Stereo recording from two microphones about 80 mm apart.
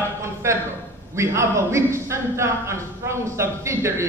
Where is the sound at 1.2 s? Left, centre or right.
Right.